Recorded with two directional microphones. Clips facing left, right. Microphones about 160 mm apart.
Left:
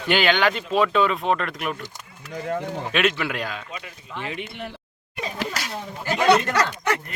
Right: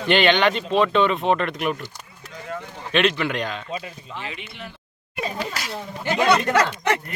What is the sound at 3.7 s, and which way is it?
Speech, 25° right (ahead or behind).